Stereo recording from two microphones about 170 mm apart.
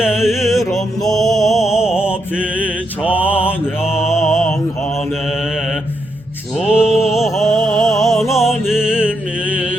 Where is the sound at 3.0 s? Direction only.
10° right (ahead or behind).